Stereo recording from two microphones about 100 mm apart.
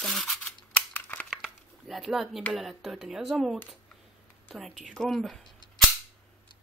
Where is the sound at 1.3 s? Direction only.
5° right (ahead or behind).